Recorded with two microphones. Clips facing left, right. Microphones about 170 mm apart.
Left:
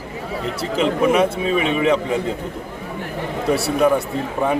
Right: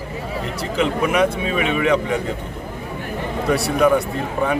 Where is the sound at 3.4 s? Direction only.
5° left (ahead or behind).